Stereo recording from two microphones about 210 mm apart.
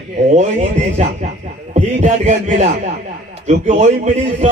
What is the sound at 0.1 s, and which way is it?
Speech, 35° right (ahead or behind).